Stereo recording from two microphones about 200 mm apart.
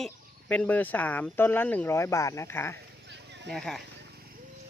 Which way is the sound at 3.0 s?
60° right (ahead or behind).